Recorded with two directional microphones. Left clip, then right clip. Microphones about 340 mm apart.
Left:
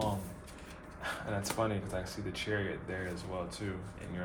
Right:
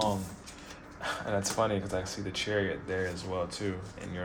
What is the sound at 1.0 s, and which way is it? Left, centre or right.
Speech, right.